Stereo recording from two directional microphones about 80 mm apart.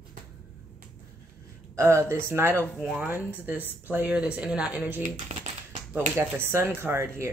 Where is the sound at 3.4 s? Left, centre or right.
Right.